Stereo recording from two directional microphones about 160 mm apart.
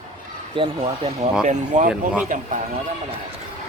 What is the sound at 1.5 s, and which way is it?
Speech, 50° right (ahead or behind).